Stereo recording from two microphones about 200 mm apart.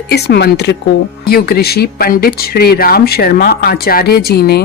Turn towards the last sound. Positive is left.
turn(degrees=50)  # may be behind; listen again after turning